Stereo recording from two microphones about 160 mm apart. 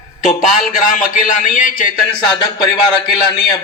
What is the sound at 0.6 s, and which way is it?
A man's voice, 55° left (ahead or behind).